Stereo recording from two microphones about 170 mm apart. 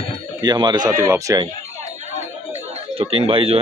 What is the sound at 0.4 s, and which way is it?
Speech, 25° right (ahead or behind).